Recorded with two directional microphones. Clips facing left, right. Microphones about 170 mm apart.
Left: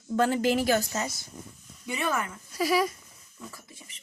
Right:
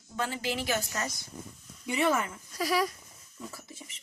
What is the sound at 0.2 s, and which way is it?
Speech, 50° left (ahead or behind).